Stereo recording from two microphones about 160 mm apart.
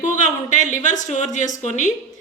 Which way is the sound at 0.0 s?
50° left (ahead or behind).